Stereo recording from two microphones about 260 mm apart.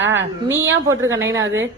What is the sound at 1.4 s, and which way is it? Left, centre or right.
Speech, right.